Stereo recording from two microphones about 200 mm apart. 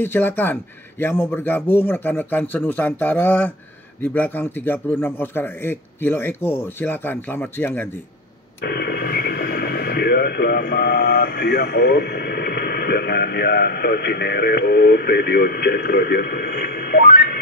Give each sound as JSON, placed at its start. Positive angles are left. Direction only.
{"t": 0.0, "sound": "a man's voice", "side_deg": 10}
{"t": 8.6, "sound": "speech", "side_deg": 55}